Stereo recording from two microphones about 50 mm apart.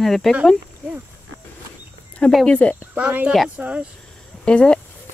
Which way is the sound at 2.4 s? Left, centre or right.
Left.